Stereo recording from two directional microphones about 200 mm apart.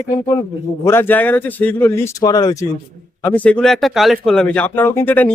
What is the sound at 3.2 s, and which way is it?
A man's voice, 5° left (ahead or behind).